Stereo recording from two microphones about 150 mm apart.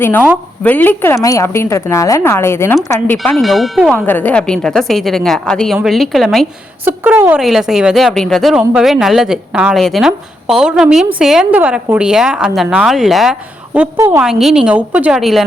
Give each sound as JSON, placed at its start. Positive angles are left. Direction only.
{"t": 0.0, "sound": "a woman's voice", "side_deg": 10}
{"t": 3.3, "sound": "speech", "side_deg": 0}
{"t": 3.9, "sound": "speech", "side_deg": 10}
{"t": 6.8, "sound": "a woman's voice", "side_deg": -15}
{"t": 13.7, "sound": "a woman's voice", "side_deg": -20}
{"t": 14.2, "sound": "speech", "side_deg": -5}